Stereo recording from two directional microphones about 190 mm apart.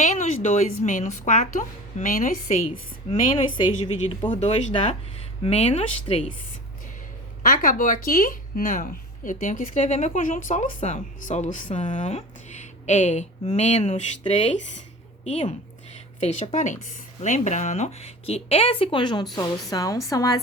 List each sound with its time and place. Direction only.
0.0 s a woman's voice: 40° left (ahead or behind)
4.3 s a woman's voice: 35° left (ahead or behind)
7.4 s a woman's voice: 45° left (ahead or behind); by 20.4 s 20° left (ahead or behind)